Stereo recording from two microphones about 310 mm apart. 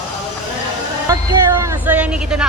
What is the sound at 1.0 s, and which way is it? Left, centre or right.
Speech, centre.